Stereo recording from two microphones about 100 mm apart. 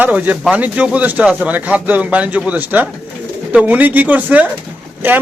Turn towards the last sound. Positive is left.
turn(degrees=-20)  # may be behind; listen again after turning